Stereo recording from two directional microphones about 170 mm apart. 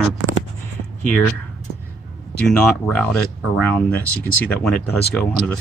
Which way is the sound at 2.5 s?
10° left (ahead or behind).